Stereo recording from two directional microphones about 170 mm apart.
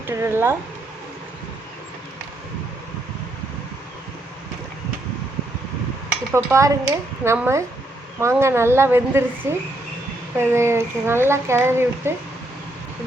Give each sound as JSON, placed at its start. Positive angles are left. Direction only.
{"t": 0.1, "sound": "speech", "side_deg": -15}
{"t": 6.3, "sound": "speech", "side_deg": -15}